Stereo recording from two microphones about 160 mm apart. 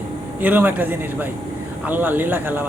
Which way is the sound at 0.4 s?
10° right (ahead or behind).